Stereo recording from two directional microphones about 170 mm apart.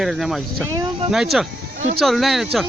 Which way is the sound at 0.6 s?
20° right (ahead or behind).